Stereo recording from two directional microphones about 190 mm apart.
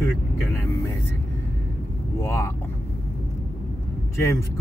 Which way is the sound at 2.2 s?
15° left (ahead or behind).